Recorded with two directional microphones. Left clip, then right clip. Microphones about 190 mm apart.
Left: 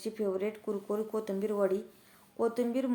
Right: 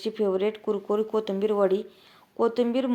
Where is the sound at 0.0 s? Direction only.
25° right (ahead or behind).